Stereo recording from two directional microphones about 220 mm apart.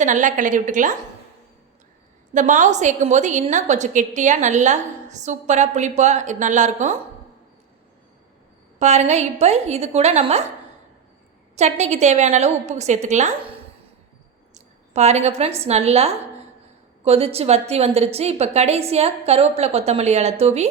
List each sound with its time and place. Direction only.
0.0 s a woman's voice: 35° right (ahead or behind)
2.3 s a woman's voice: 35° right (ahead or behind)
8.8 s a woman's voice: 30° right (ahead or behind)
11.5 s a woman's voice: 30° right (ahead or behind)